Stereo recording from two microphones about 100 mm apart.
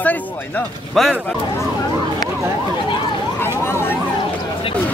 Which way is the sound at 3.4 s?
25° left (ahead or behind).